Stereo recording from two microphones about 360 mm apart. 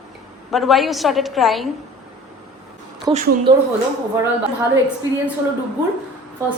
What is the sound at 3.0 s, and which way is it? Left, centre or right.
Speech, centre.